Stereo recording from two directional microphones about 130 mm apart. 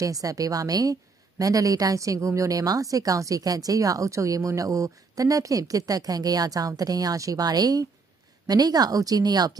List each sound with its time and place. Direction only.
0.0 s a woman's voice: 25° right (ahead or behind)